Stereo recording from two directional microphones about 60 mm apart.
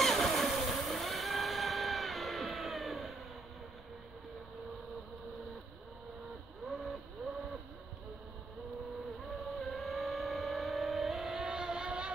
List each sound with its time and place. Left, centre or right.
0.0 s vehicle: centre
9.3 s vehicle: centre